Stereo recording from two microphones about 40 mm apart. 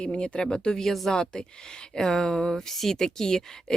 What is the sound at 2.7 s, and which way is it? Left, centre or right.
Speech, centre.